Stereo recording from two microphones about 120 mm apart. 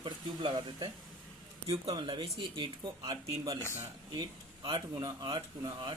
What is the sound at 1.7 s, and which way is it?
Speech, 50° right (ahead or behind).